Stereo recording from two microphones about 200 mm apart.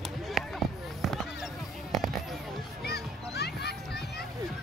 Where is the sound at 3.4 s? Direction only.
55° left (ahead or behind).